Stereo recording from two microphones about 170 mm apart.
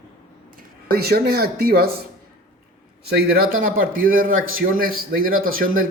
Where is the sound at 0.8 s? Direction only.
65° right (ahead or behind).